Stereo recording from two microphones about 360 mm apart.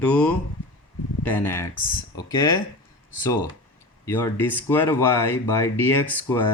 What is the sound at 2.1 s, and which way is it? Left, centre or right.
Speech, centre.